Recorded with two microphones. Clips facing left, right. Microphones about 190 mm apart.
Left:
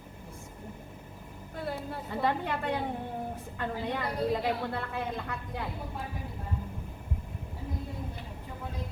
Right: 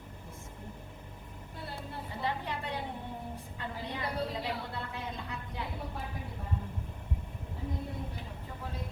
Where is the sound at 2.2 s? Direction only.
55° left (ahead or behind).